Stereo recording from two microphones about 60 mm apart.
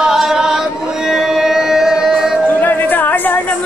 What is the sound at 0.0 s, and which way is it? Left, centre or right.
Chant, centre.